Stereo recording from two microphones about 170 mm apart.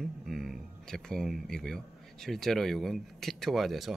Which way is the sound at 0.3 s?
Centre (ahead or behind).